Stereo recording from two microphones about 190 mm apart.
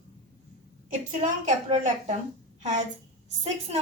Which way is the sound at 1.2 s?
35° right (ahead or behind).